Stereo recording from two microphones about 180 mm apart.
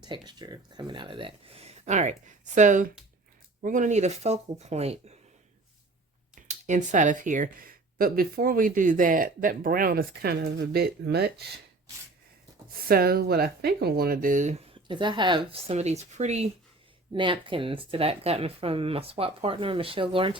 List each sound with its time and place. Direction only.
0.0 s speech: 25° right (ahead or behind)
6.3 s speech: 40° right (ahead or behind); by 11.4 s 65° right (ahead or behind)
12.9 s speech: 60° right (ahead or behind); by 16.5 s 40° right (ahead or behind)
17.1 s speech: 25° right (ahead or behind)